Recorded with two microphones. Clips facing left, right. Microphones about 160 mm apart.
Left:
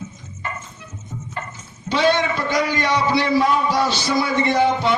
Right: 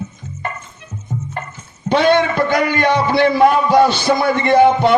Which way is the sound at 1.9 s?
55° right (ahead or behind).